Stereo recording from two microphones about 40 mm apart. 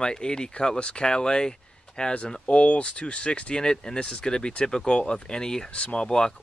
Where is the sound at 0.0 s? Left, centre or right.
Centre.